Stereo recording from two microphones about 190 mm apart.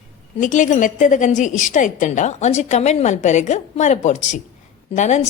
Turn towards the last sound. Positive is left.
turn(degrees=35)  # may be behind; listen again after turning